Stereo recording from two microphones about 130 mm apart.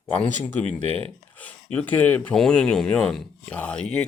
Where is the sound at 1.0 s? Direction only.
10° left (ahead or behind).